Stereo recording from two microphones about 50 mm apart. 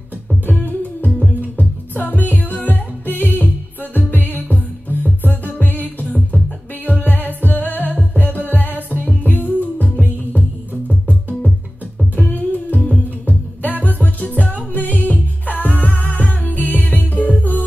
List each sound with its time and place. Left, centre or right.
0.5 s music: left
6.0 s music: centre
6.9 s music: left
12.2 s music: left